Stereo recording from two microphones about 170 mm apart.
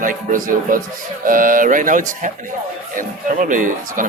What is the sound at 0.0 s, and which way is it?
Speech, 50° right (ahead or behind).